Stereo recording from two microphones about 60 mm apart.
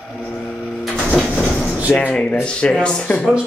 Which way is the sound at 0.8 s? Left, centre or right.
Centre.